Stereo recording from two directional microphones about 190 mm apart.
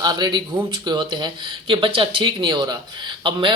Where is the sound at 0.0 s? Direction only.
20° right (ahead or behind).